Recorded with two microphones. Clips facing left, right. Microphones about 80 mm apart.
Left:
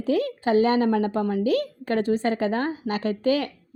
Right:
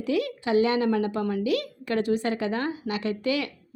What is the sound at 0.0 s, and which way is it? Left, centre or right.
A woman's voice, left.